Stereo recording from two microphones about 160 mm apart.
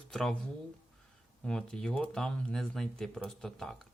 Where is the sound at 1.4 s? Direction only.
5° left (ahead or behind).